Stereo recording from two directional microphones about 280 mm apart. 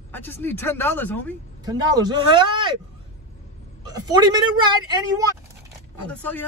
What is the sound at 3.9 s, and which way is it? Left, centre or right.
Speech, centre.